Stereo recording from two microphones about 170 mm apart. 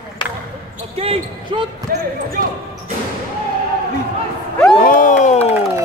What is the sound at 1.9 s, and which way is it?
Speech, 60° right (ahead or behind).